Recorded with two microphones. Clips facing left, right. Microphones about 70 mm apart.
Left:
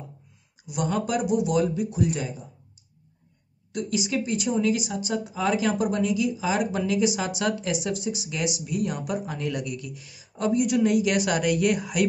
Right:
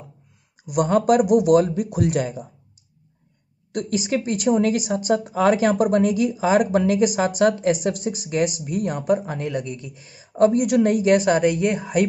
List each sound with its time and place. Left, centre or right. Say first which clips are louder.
0.7 s speech: right 9 dB; right
3.7 s speech: right 4 dB; right